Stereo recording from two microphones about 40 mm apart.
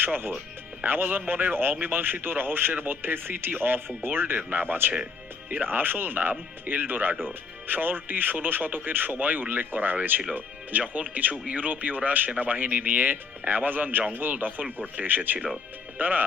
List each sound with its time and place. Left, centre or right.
0.0 s speech: right
1.3 s speech: right
1.8 s speech: right
4.4 s speech: right